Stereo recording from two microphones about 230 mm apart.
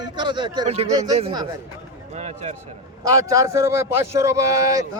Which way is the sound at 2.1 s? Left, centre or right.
Right.